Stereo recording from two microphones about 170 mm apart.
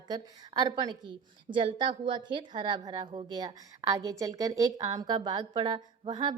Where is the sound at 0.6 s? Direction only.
25° right (ahead or behind).